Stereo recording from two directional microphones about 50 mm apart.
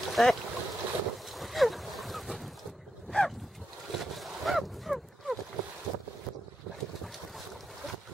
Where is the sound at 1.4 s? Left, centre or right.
Centre.